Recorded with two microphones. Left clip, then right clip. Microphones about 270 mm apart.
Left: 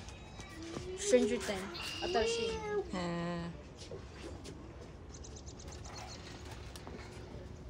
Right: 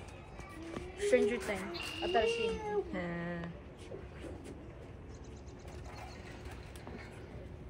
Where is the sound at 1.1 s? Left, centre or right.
Left.